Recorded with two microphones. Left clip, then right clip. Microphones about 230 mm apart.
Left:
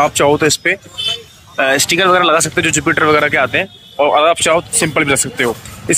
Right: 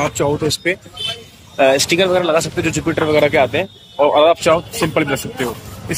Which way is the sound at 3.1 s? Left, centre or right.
Centre.